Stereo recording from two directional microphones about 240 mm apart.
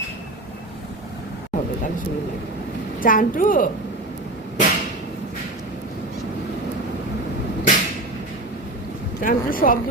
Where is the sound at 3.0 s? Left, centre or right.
Left.